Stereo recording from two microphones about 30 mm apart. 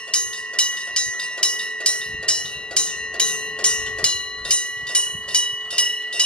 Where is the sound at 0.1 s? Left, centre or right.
Left.